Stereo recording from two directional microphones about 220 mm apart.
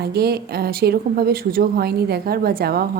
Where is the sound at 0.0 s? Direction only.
45° right (ahead or behind).